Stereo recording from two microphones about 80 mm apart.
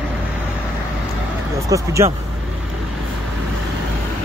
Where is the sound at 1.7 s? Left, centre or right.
Right.